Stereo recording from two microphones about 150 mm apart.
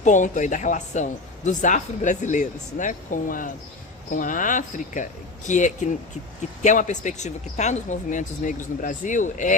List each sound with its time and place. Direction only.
0.0 s speech: 55° left (ahead or behind)